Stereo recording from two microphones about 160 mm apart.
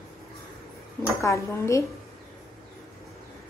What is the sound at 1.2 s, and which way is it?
Speech, 20° left (ahead or behind).